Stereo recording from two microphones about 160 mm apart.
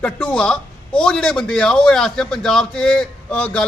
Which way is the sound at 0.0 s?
10° left (ahead or behind).